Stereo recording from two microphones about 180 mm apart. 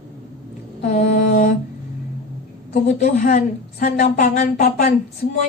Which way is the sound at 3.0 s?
45° left (ahead or behind).